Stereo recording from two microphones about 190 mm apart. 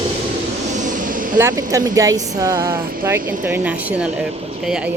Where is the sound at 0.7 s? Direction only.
40° right (ahead or behind).